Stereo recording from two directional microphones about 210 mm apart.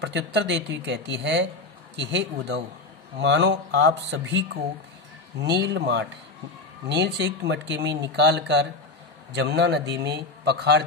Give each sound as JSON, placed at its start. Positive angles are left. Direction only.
{"t": 0.0, "sound": "speech", "side_deg": -55}